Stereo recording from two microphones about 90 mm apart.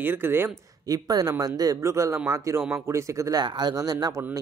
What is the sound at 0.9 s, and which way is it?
Speech, 45° right (ahead or behind).